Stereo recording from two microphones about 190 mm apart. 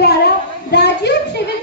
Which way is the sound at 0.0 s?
60° left (ahead or behind).